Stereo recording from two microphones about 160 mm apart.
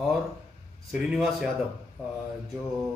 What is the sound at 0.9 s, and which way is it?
Speech, 5° right (ahead or behind).